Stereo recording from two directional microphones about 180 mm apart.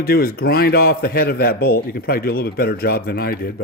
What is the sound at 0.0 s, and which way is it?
A man's voice, 55° left (ahead or behind).